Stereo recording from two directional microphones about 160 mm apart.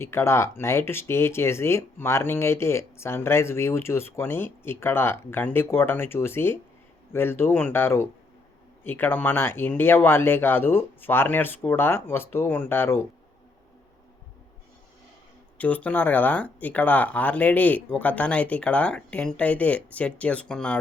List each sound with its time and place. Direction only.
0.0 s speech: 15° left (ahead or behind)
15.5 s speech: 10° left (ahead or behind)